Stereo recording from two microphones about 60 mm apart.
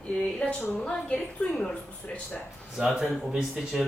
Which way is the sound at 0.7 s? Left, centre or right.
Left.